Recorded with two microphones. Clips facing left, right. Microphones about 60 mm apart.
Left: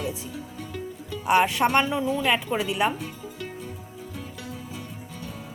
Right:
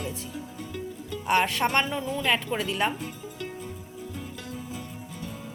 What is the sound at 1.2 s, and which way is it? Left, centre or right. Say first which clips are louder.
Speech: left 3 dB; centre.